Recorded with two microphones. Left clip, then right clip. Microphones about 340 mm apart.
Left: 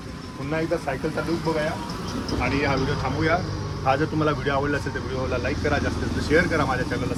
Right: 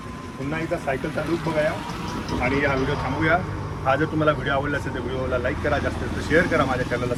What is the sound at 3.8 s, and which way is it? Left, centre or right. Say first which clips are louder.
Speech: right 2 dB; centre.